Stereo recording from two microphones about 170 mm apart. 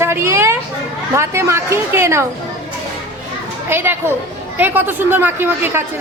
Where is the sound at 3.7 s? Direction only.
10° right (ahead or behind).